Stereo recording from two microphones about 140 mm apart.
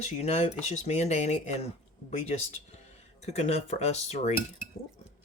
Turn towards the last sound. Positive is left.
turn(degrees=50)  # may be behind; listen again after turning